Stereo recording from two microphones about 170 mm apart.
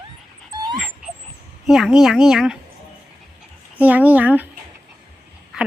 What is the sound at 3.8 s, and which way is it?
Speech, 10° right (ahead or behind).